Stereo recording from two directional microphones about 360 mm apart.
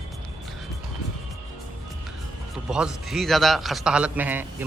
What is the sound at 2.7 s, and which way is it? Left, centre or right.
A man's voice, centre.